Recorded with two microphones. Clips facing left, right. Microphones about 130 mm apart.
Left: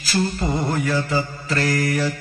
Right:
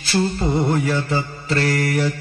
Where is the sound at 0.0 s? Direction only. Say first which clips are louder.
Right 2 dB; 30° right (ahead or behind).